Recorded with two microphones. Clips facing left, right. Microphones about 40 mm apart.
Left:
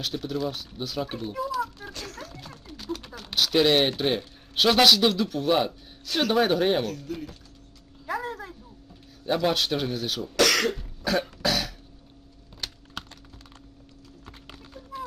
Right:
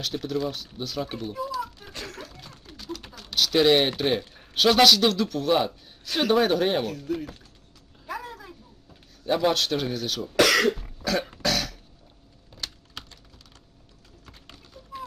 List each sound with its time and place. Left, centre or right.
0.0 s speech: centre
1.9 s music: right
3.3 s speech: centre
9.2 s speech: centre
10.3 s cough: centre
11.0 s cough: centre
11.4 s throat clearing: centre
14.3 s clip-clop: centre